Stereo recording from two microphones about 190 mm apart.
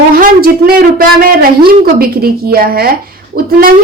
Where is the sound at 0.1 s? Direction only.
50° right (ahead or behind).